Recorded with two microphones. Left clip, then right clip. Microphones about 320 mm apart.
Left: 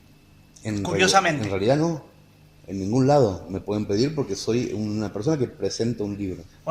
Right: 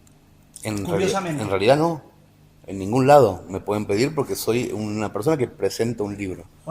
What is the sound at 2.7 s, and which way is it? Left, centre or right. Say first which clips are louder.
Speech: right 1 dB; right.